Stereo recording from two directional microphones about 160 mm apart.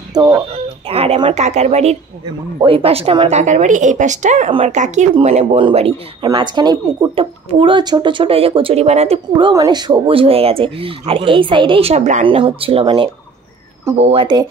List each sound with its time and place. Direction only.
0.1 s speech: 25° right (ahead or behind)
0.8 s a woman's voice: 40° right (ahead or behind)
12.3 s speech: 35° right (ahead or behind)